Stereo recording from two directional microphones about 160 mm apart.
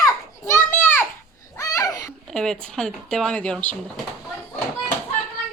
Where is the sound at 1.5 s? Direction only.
20° left (ahead or behind).